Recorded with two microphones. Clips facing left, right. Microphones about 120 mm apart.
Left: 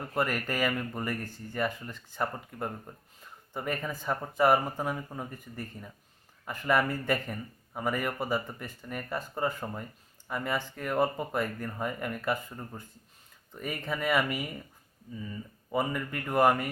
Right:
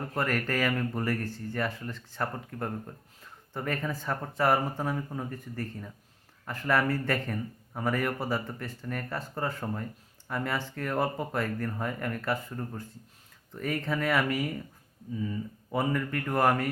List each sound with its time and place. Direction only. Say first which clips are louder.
0.1 s speech: even; 10° left (ahead or behind)